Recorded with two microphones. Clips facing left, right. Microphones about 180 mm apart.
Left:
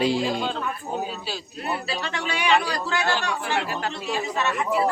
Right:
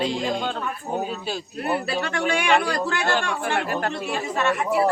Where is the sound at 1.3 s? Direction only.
50° right (ahead or behind).